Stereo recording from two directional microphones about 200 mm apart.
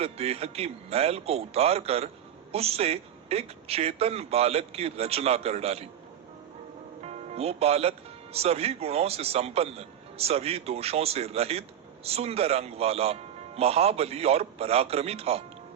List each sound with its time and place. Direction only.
0.0 s speech: 30° right (ahead or behind)
7.0 s speech: 30° right (ahead or behind)